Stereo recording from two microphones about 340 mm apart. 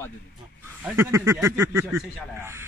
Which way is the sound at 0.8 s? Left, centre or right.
Centre.